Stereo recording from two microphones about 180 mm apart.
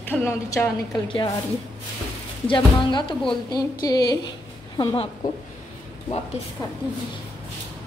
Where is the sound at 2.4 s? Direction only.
25° left (ahead or behind).